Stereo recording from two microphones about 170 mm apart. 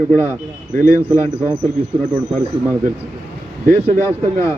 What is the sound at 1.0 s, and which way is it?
Speech, 10° right (ahead or behind).